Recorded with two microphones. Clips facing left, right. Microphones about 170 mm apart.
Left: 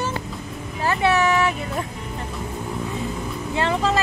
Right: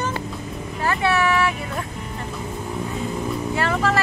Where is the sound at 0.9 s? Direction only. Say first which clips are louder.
Left 1 dB; 20° left (ahead or behind).